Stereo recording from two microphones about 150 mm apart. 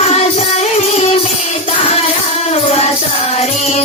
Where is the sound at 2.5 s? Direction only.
45° left (ahead or behind).